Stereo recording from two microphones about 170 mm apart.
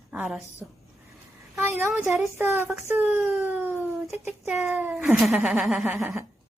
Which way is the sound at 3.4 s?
10° right (ahead or behind).